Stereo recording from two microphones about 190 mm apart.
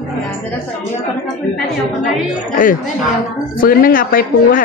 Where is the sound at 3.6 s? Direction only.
50° left (ahead or behind).